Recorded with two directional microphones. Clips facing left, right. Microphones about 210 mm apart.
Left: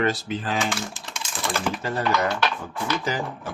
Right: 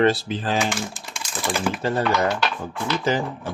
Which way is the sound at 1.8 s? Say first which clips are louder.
Right 5 dB; 30° right (ahead or behind).